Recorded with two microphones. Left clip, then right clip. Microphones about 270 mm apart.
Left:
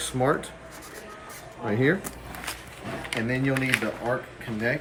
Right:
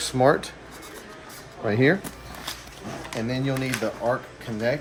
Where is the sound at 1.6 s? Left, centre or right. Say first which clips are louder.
Right 3 dB; right.